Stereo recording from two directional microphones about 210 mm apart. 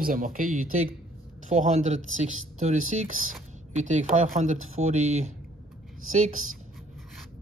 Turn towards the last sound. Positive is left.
turn(degrees=-80)